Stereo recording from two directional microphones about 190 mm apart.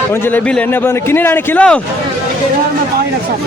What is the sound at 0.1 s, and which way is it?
A man's voice, 10° left (ahead or behind).